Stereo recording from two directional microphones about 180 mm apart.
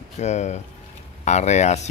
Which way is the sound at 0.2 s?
40° left (ahead or behind).